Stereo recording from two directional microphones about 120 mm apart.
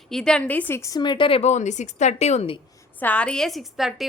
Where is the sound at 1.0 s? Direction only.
45° left (ahead or behind).